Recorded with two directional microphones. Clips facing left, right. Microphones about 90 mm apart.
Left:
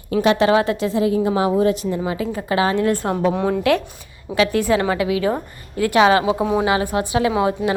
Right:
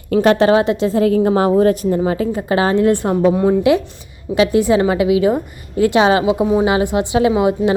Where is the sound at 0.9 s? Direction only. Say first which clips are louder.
Right 4 dB; 50° right (ahead or behind).